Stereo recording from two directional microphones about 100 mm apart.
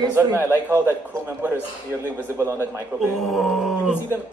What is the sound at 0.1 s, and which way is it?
A man's voice, 25° right (ahead or behind).